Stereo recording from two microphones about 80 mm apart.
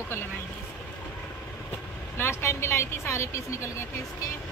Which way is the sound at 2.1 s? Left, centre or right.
Left.